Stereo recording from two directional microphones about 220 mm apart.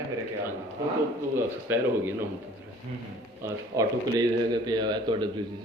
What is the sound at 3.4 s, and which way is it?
A man's voice, 15° right (ahead or behind).